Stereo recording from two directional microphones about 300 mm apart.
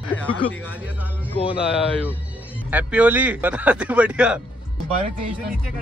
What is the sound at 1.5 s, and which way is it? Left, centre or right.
A man's voice, centre.